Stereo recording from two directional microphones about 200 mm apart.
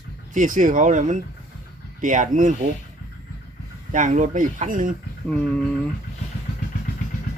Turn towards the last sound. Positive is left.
turn(degrees=5)  # may be behind; listen again after turning